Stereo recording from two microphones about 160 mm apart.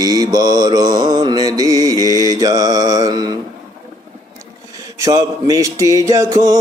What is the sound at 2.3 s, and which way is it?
Music, 25° right (ahead or behind).